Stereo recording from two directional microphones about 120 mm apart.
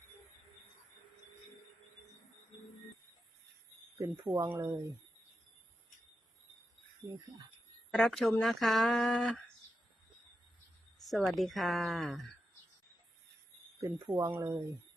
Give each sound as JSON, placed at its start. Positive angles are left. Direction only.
{"t": 3.9, "sound": "speech", "side_deg": -20}
{"t": 7.9, "sound": "speech", "side_deg": 5}
{"t": 11.0, "sound": "speech", "side_deg": 0}
{"t": 13.8, "sound": "speech", "side_deg": -20}